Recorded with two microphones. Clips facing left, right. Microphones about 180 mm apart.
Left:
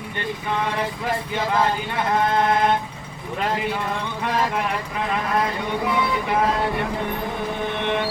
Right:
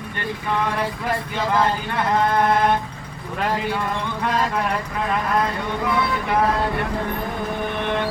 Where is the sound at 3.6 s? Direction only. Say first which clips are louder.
Right 1 dB; 15° left (ahead or behind).